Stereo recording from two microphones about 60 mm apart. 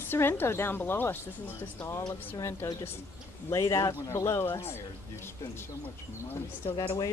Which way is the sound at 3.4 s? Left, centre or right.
Left.